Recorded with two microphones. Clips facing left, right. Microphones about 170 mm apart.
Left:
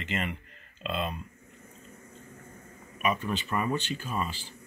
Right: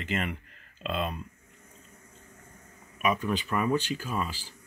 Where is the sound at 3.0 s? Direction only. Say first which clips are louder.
Right 2 dB; 10° right (ahead or behind).